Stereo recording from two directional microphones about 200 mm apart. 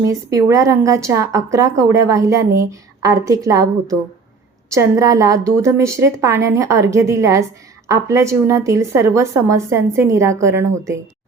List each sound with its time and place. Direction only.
0.1 s speech: 15° right (ahead or behind)